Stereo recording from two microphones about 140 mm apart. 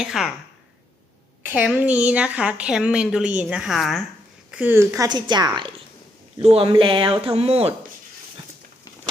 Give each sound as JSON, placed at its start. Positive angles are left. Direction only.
{"t": 0.0, "sound": "speech", "side_deg": 0}
{"t": 1.5, "sound": "a woman's voice", "side_deg": -10}
{"t": 4.5, "sound": "a woman's voice", "side_deg": -15}